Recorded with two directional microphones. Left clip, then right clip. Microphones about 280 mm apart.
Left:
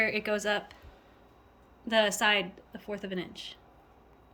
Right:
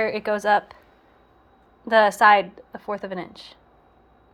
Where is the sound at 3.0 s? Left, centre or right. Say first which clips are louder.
Right 6 dB; right.